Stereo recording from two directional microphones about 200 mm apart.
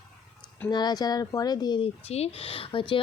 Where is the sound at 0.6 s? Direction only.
20° left (ahead or behind).